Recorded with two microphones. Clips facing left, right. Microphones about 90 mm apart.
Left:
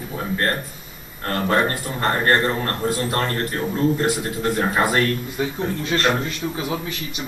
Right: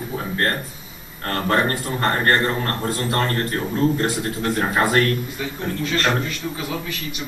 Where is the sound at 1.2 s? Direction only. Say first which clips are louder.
Even; 5° left (ahead or behind).